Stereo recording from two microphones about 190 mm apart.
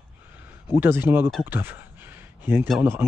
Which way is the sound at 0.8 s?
10° right (ahead or behind).